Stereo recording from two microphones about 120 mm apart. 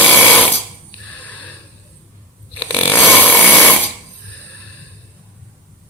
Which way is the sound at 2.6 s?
15° left (ahead or behind).